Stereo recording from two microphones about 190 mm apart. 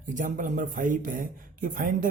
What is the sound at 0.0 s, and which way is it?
Speech, 40° right (ahead or behind).